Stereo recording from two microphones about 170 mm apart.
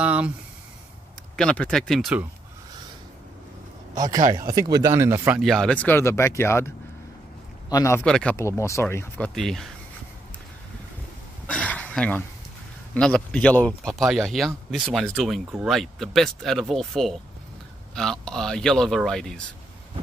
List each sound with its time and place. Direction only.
0.0 s speech: 5° right (ahead or behind)
1.3 s speech: 5° left (ahead or behind)
3.9 s speech: 20° right (ahead or behind)
5.4 s speech: centre (ahead or behind)
7.7 s speech: 15° left (ahead or behind)
8.0 s speech: 5° left (ahead or behind)
8.4 s speech: 15° left (ahead or behind)
11.4 s a sound: 5° left (ahead or behind)
12.9 s speech: 5° left (ahead or behind)